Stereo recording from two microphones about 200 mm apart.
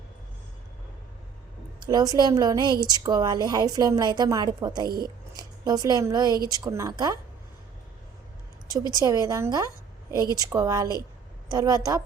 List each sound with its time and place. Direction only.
1.8 s a woman's voice: 20° right (ahead or behind)
8.9 s a woman's voice: 20° right (ahead or behind)